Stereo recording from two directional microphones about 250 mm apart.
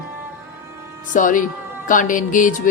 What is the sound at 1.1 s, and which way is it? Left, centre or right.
A woman's voice, left.